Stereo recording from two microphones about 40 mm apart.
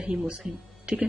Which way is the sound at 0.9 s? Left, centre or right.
Right.